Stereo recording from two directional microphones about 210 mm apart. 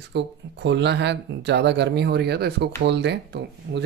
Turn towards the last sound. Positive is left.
turn(degrees=-55)  # may be behind; listen again after turning